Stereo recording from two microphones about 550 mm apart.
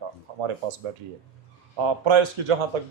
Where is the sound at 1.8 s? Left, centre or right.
Right.